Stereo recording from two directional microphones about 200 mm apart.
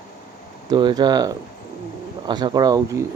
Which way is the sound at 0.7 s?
20° right (ahead or behind).